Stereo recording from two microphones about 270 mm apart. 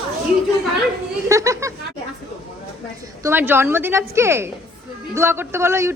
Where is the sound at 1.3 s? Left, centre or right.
Centre.